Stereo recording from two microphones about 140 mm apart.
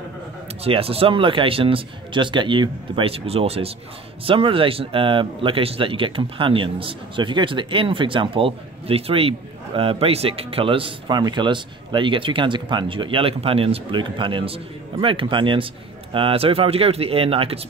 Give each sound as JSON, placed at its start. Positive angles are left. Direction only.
{"t": 0.7, "sound": "speech", "side_deg": -45}